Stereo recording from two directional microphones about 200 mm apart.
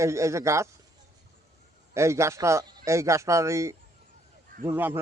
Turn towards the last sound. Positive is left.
turn(degrees=-10)  # may be behind; listen again after turning